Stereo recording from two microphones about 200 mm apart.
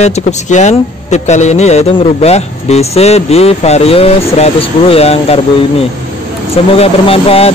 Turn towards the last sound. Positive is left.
turn(degrees=30)  # may be behind; listen again after turning